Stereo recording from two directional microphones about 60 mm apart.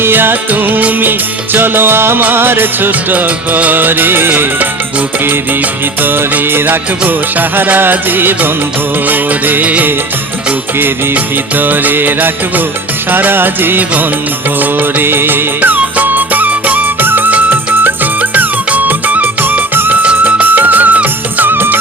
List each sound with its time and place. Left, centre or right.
0.0 s music: right